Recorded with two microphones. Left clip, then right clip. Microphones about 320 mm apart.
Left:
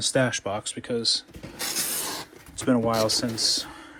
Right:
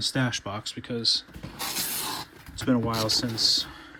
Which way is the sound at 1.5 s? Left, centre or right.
Right.